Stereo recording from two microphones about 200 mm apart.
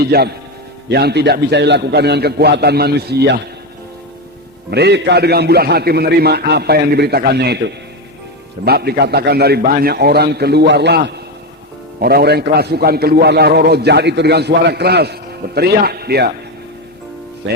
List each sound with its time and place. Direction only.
0.0 s a man's voice: 50° right (ahead or behind)
4.7 s a man's voice: 55° right (ahead or behind)
17.5 s speech: 65° right (ahead or behind)